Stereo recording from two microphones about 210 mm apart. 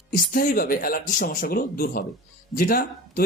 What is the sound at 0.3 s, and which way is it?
Speech, 45° left (ahead or behind).